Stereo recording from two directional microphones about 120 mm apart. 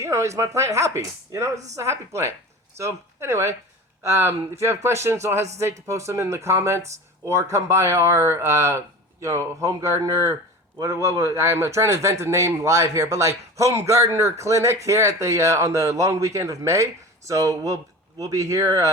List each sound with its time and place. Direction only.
0.0 s speech: 25° right (ahead or behind)